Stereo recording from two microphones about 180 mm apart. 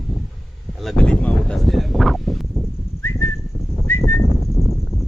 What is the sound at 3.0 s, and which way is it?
Whistling, 15° left (ahead or behind).